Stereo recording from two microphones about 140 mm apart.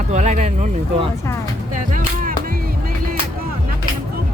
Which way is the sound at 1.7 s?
70° right (ahead or behind).